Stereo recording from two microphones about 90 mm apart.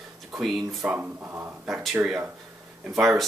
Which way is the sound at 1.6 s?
Centre (ahead or behind).